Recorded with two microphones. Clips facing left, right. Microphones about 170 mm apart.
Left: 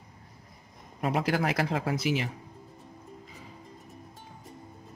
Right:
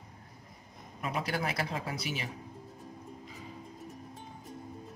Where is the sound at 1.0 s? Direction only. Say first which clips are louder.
Left 6 dB; 65° left (ahead or behind).